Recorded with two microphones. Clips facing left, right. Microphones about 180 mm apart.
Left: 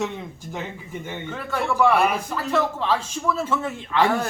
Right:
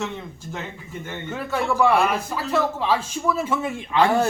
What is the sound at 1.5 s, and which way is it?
A man's voice, 10° right (ahead or behind).